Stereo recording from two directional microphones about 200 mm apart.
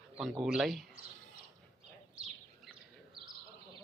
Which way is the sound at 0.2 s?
Centre (ahead or behind).